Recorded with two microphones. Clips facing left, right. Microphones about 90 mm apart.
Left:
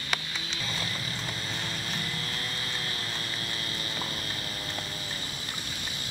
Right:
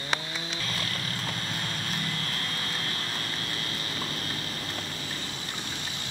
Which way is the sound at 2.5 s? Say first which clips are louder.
Right 2 dB; 45° right (ahead or behind).